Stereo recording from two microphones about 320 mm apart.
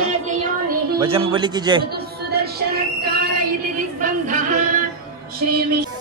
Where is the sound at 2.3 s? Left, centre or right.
Right.